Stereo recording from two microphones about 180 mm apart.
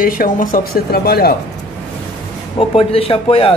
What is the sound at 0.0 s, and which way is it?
Speech, 50° left (ahead or behind).